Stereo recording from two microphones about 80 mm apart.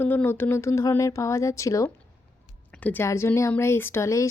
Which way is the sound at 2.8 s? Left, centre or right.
Left.